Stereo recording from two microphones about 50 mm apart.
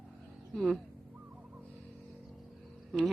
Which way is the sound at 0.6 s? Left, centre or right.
Centre.